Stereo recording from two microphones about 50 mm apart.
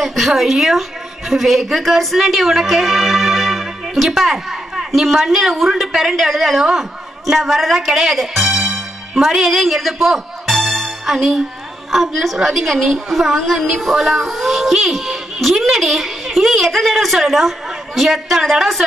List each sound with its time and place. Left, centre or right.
0.0 s a woman's voice: centre